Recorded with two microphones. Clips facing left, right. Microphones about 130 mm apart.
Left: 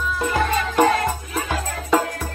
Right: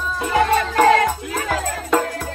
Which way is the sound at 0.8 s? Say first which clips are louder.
Right 5 dB; 80° right.